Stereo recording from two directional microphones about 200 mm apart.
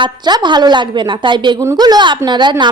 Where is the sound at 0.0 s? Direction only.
20° right (ahead or behind).